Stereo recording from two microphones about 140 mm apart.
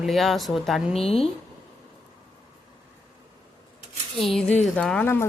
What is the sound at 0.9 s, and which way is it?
Speech, 45° left (ahead or behind).